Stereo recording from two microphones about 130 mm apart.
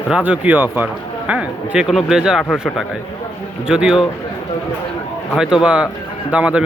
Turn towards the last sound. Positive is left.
turn(degrees=-10)  # may be behind; listen again after turning